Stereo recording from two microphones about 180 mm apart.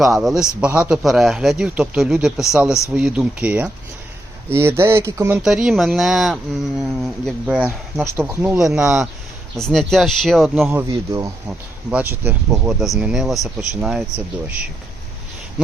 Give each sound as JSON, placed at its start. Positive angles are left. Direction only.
{"t": 0.0, "sound": "a man's voice", "side_deg": 0}
{"t": 5.4, "sound": "a man's voice", "side_deg": -5}
{"t": 10.8, "sound": "a man's voice", "side_deg": -15}